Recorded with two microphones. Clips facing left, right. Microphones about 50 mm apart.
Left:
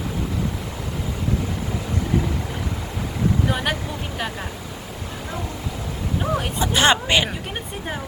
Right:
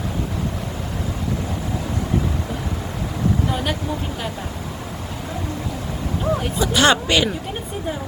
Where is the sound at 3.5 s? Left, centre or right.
Left.